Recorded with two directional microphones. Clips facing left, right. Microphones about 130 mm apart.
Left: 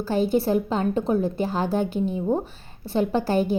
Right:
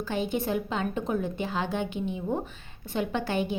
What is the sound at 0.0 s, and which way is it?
A woman's voice, 35° left (ahead or behind).